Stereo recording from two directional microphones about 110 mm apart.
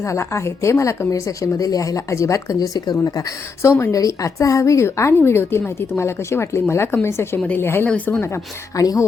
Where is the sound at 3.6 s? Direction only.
25° left (ahead or behind).